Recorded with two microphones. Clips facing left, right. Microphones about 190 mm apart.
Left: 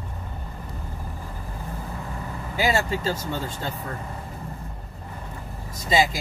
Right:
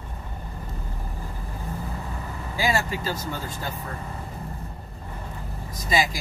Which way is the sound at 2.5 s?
20° left (ahead or behind).